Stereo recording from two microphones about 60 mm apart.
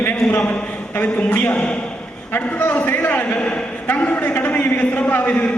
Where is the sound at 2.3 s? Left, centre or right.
Left.